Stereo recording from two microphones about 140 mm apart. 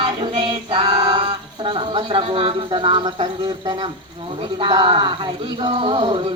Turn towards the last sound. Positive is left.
turn(degrees=-35)  # may be behind; listen again after turning